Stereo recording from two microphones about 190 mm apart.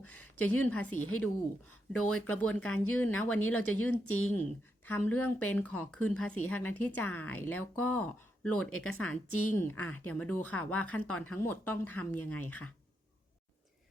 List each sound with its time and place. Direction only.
0.2 s speech: 10° left (ahead or behind)
3.4 s speech: 90° left
3.8 s speech: 10° left (ahead or behind)